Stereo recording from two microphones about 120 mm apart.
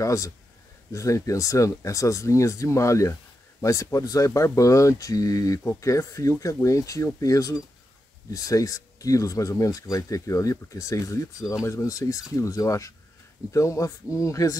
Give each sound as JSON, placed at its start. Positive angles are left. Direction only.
{"t": 0.0, "sound": "speech", "side_deg": 25}